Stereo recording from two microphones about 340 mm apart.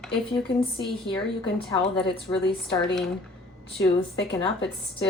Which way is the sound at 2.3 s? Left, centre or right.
Centre.